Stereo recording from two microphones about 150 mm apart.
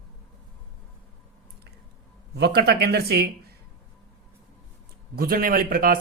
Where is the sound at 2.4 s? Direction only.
90° right.